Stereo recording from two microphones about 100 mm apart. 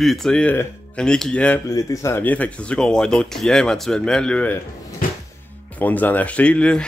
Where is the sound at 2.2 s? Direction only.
15° left (ahead or behind).